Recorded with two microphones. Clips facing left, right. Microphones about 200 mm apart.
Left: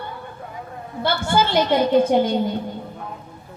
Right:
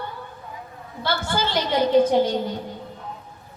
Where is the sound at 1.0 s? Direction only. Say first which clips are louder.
Left 4 dB; 55° left (ahead or behind).